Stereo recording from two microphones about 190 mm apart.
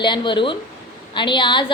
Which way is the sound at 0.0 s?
25° left (ahead or behind).